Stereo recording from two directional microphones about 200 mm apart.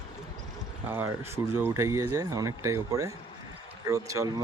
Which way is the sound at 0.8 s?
10° right (ahead or behind).